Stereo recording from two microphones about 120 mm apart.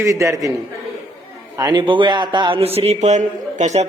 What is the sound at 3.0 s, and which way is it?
Speech, 80° right.